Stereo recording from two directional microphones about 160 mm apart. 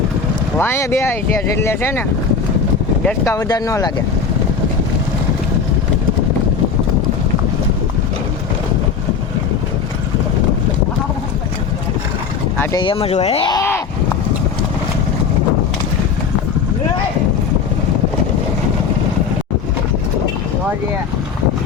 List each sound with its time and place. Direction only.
0.6 s speech: 15° left (ahead or behind)
3.2 s speech: 20° left (ahead or behind)
12.7 s speech: 30° left (ahead or behind)
13.5 s speech: 15° left (ahead or behind)